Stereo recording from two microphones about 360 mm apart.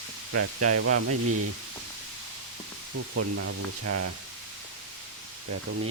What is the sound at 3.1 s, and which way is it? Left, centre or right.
Speech, right.